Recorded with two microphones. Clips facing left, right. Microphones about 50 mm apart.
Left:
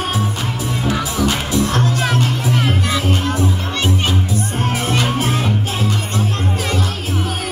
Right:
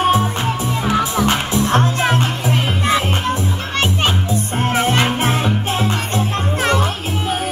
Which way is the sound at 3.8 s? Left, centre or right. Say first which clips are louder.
Right 1 dB; right.